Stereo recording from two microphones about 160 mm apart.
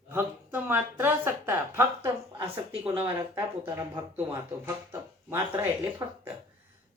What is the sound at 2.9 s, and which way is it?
Speech, 30° right (ahead or behind).